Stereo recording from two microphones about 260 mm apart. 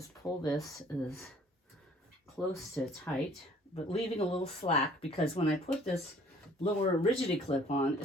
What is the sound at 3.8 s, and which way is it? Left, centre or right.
Speech, left.